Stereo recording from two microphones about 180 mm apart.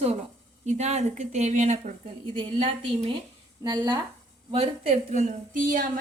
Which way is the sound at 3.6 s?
25° right (ahead or behind).